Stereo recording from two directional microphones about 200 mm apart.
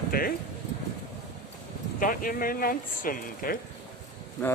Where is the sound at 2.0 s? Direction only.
45° left (ahead or behind).